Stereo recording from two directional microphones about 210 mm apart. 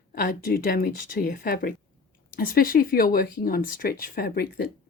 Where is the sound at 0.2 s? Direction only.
40° left (ahead or behind).